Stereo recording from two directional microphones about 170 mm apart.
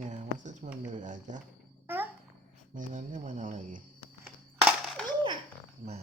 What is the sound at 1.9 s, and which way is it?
Babbling, 10° right (ahead or behind).